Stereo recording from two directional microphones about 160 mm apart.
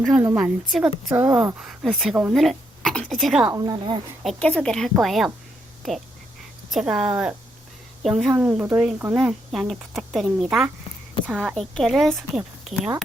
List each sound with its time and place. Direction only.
0.0 s a woman's voice: 5° right (ahead or behind)
3.5 s a woman's voice: 25° right (ahead or behind)
4.2 s a woman's voice: 5° left (ahead or behind)
6.7 s a woman's voice: centre (ahead or behind)